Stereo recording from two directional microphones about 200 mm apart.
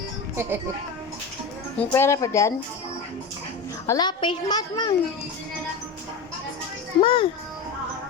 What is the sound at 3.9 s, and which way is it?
A child's voice, 20° left (ahead or behind).